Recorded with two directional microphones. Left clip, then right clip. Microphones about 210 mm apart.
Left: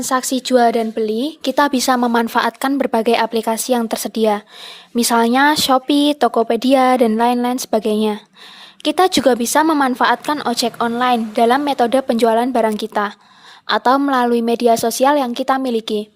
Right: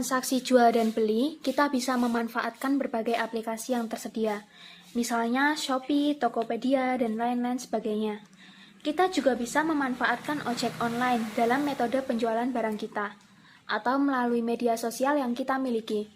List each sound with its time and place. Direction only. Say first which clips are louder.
0.0 s speech: left 10 dB; 35° left (ahead or behind)
1.4 s a woman's voice: left 11 dB; 40° left (ahead or behind)